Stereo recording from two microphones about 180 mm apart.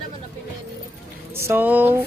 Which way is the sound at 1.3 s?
10° right (ahead or behind).